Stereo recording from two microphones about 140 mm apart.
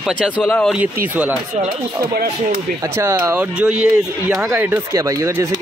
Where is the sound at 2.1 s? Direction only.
90° right.